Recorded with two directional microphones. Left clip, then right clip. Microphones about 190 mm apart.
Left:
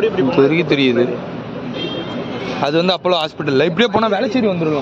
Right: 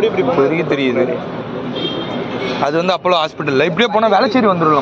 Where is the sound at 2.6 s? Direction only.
35° left (ahead or behind).